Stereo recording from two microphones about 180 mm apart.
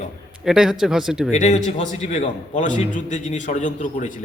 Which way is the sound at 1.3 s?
40° left (ahead or behind).